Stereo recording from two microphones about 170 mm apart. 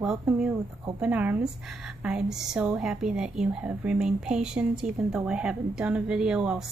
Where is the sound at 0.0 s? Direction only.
5° right (ahead or behind).